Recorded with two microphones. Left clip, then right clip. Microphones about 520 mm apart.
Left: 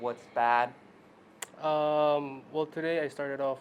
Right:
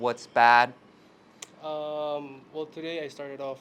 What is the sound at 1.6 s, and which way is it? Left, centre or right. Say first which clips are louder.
Speech: left 6 dB; left.